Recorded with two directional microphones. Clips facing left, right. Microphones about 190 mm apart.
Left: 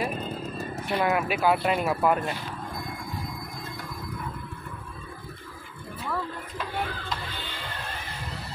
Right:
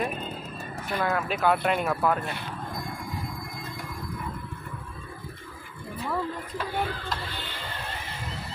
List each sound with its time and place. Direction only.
0.9 s speech: 20° left (ahead or behind)
1.2 s speech: 10° left (ahead or behind)
6.0 s speech: 10° right (ahead or behind)